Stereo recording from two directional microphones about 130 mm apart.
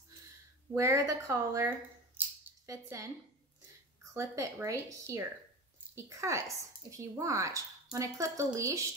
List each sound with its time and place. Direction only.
0.7 s speech: 25° right (ahead or behind)